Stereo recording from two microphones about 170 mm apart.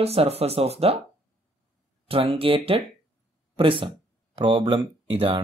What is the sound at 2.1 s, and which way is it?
Speech, 35° right (ahead or behind).